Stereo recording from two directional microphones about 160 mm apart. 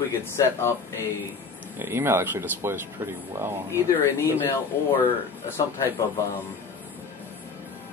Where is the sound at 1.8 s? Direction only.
15° right (ahead or behind).